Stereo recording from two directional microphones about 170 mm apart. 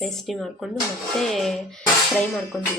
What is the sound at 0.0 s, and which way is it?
Speech, centre (ahead or behind).